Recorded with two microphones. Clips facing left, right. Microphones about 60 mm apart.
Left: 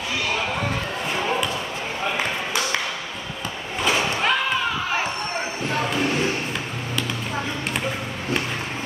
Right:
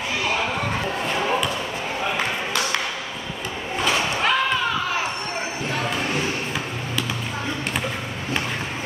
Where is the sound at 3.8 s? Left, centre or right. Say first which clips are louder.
Even; centre.